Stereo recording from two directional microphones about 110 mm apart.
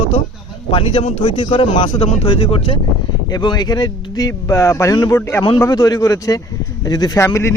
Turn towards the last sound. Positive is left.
turn(degrees=25)  # may be behind; listen again after turning